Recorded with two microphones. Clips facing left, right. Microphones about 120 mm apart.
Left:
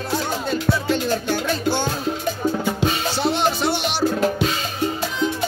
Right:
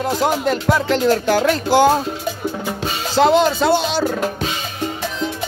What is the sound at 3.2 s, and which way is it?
Speech, 90° right.